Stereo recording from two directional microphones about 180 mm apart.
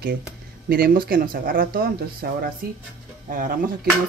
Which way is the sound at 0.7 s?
55° right (ahead or behind).